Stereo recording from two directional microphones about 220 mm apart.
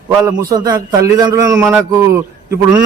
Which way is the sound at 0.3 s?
15° right (ahead or behind).